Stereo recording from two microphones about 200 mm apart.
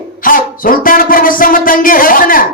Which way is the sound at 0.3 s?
45° left (ahead or behind).